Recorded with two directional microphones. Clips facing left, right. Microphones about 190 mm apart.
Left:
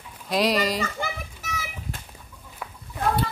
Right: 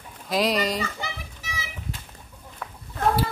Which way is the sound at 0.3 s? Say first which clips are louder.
Left 1 dB; centre (ahead or behind).